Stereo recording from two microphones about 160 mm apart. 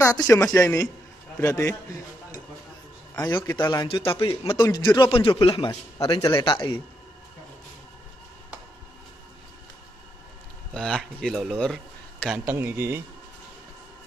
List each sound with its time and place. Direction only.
0.0 s a man's voice: 20° left (ahead or behind)
3.3 s a man's voice: 25° left (ahead or behind)
5.7 s a man's voice: 20° left (ahead or behind)
6.4 s a man's voice: 30° left (ahead or behind)
10.7 s a man's voice: 5° left (ahead or behind)
12.4 s speech: 15° right (ahead or behind)